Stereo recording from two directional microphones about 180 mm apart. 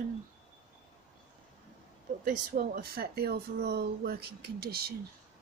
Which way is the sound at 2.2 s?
50° right (ahead or behind).